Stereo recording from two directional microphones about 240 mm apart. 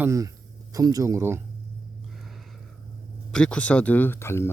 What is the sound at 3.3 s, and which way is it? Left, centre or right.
Speech, centre.